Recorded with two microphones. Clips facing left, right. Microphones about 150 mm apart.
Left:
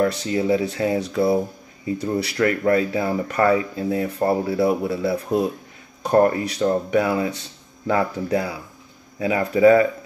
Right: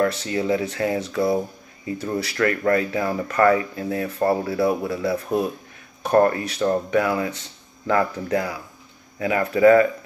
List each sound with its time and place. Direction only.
0.0 s speech: 15° left (ahead or behind)
6.0 s speech: 15° left (ahead or behind)